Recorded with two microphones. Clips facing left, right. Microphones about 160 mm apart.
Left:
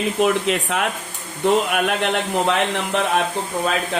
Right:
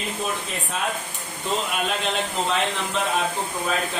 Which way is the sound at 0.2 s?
80° left.